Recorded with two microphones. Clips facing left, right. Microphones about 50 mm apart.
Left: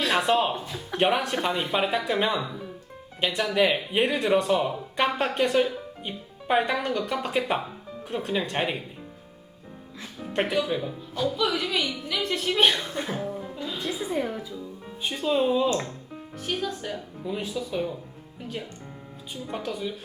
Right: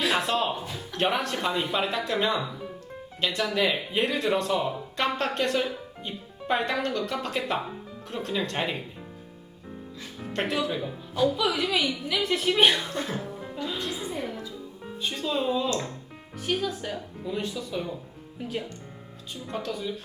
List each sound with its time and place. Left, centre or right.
0.0 s a sound: centre
0.3 s speech: centre
2.4 s speech: centre
3.2 s speech: centre
4.0 s speech: centre
10.4 s a woman's voice: centre
13.0 s speech: centre
14.0 s music: centre
14.3 s speech: centre
16.4 s a woman's voice: centre
19.3 s speech: centre